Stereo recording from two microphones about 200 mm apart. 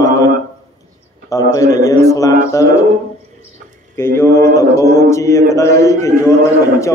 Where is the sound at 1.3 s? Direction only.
15° left (ahead or behind).